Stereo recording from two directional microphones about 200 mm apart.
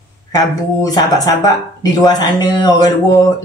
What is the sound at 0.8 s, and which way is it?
Speech, 20° left (ahead or behind).